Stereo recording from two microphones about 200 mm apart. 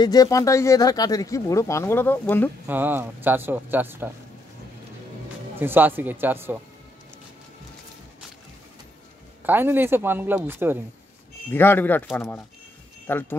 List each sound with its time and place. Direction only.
0.0 s speech: 20° left (ahead or behind)
2.6 s speech: 10° right (ahead or behind)
5.6 s speech: 10° right (ahead or behind)
9.4 s speech: 10° right (ahead or behind)
11.5 s speech: 10° left (ahead or behind)